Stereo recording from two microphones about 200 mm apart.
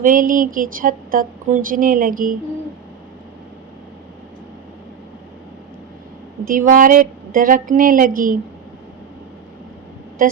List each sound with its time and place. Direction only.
0.0 s speech: 40° right (ahead or behind)
6.5 s speech: 40° right (ahead or behind)